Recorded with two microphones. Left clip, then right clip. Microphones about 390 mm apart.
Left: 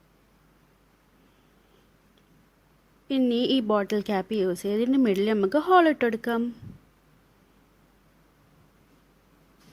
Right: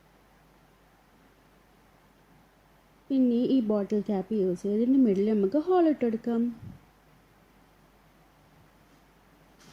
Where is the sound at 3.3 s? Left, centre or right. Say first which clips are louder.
Left 3 dB; left.